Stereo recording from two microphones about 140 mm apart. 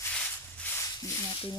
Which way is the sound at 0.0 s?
10° left (ahead or behind).